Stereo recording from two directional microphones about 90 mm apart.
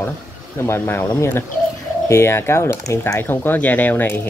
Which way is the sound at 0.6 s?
25° left (ahead or behind).